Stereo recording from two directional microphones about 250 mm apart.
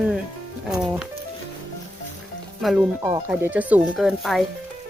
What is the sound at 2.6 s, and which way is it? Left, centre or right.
Speech, centre.